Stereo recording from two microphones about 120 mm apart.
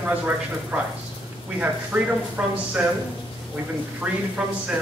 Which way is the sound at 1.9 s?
15° right (ahead or behind).